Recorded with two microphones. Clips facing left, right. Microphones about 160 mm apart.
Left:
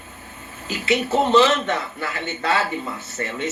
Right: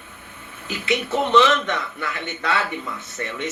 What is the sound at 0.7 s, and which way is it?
Speech, 25° left (ahead or behind).